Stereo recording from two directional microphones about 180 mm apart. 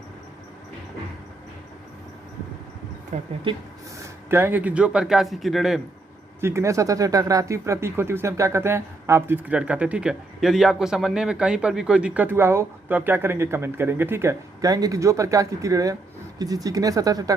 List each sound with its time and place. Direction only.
3.1 s speech: 40° right (ahead or behind)
4.0 s speech: 15° right (ahead or behind)
6.4 s speech: 15° right (ahead or behind)